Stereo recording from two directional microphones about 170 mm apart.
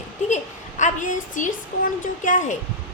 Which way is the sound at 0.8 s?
50° left (ahead or behind).